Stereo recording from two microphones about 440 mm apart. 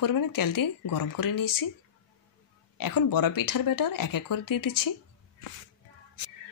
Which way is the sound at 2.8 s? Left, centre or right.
Left.